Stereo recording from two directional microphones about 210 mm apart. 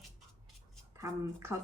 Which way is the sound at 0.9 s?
15° right (ahead or behind).